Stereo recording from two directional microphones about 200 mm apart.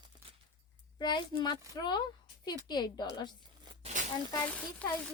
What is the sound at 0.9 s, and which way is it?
Speech, 20° left (ahead or behind).